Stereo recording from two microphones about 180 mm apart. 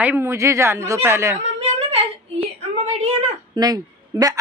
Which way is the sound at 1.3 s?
35° right (ahead or behind).